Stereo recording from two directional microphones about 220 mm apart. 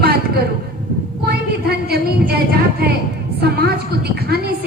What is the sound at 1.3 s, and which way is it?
Speech, 45° right (ahead or behind).